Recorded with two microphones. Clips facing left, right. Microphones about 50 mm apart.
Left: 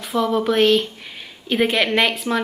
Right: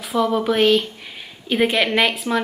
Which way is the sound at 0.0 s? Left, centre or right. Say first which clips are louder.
Even; centre.